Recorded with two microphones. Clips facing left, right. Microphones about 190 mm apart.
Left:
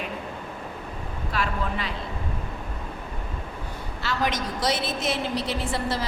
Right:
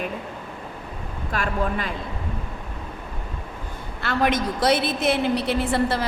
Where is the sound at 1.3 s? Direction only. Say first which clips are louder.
Right 4 dB; 50° right (ahead or behind).